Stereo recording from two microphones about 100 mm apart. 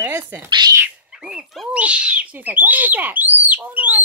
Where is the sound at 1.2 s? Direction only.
5° right (ahead or behind).